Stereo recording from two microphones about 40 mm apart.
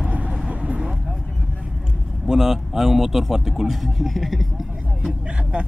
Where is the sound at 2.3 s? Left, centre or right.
Centre.